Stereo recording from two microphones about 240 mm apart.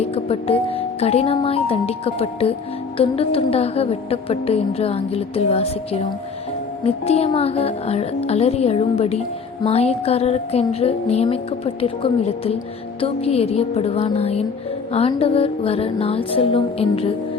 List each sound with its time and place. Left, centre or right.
0.0 s speech: left